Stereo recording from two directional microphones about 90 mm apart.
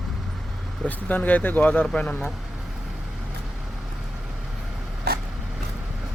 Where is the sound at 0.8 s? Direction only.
20° left (ahead or behind).